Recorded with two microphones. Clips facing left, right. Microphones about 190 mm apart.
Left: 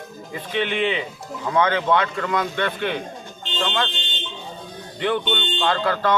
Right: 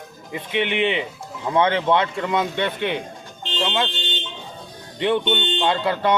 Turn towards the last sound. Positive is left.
turn(degrees=-20)  # may be behind; listen again after turning